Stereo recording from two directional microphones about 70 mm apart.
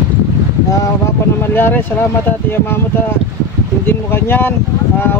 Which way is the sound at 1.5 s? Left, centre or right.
Left.